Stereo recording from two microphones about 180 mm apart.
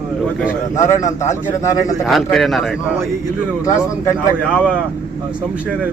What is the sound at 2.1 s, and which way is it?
Speech, centre (ahead or behind).